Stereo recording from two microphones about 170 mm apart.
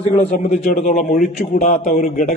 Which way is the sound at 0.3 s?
50° left (ahead or behind).